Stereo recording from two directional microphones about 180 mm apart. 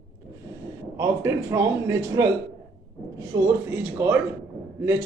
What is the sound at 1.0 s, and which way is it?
Speech, 15° right (ahead or behind).